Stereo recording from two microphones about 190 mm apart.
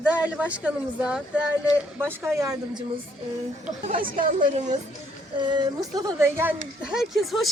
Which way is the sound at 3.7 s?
45° right (ahead or behind).